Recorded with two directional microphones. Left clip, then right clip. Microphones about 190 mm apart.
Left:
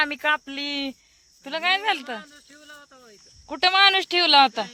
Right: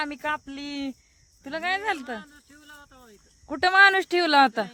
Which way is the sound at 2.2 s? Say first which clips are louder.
Left 3 dB; 55° right (ahead or behind).